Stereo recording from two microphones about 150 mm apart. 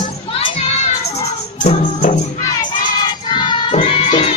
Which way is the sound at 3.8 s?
40° left (ahead or behind).